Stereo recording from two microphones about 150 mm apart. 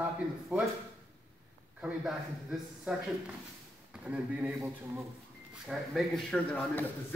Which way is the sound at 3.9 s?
10° right (ahead or behind).